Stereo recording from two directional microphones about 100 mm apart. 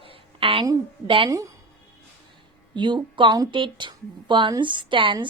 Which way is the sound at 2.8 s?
50° right (ahead or behind).